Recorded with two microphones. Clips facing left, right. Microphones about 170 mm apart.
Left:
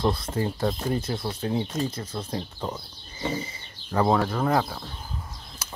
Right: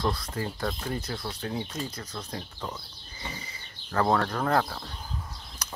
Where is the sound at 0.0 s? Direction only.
25° left (ahead or behind).